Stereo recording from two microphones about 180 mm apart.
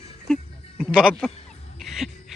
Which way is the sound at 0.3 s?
5° left (ahead or behind).